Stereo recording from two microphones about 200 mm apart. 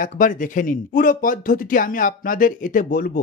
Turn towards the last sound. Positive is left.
turn(degrees=45)  # may be behind; listen again after turning